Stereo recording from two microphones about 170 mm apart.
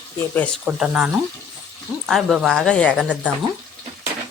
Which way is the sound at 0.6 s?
5° right (ahead or behind).